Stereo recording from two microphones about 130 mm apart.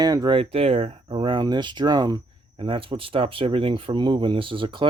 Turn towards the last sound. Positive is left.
turn(degrees=-40)  # may be behind; listen again after turning